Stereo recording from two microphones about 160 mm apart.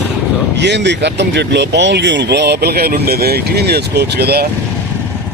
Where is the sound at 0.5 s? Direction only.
90° right.